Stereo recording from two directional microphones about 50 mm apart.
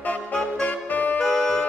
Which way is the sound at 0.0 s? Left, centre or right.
Left.